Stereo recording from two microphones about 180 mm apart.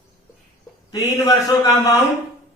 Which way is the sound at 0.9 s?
20° left (ahead or behind).